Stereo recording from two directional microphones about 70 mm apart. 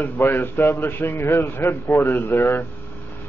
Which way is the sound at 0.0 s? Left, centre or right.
Left.